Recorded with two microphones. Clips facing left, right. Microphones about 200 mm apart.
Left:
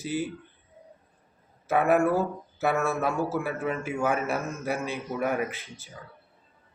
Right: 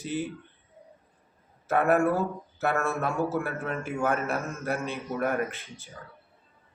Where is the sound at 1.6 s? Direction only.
5° left (ahead or behind).